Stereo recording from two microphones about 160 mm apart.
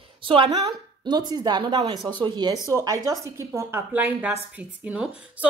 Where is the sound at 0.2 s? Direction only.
30° right (ahead or behind).